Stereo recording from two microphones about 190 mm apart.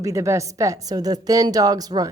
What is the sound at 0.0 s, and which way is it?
A woman's voice, 15° right (ahead or behind).